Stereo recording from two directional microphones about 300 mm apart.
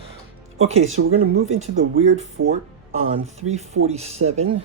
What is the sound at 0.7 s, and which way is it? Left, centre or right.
Speech, right.